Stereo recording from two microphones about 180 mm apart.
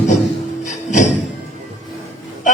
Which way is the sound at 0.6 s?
40° left (ahead or behind).